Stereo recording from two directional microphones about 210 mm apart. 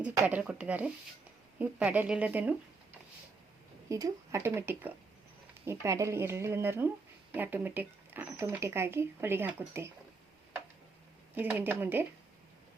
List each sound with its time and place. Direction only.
0.0 s speech: 5° right (ahead or behind)
3.8 s speech: 15° right (ahead or behind)
11.3 s speech: 10° right (ahead or behind)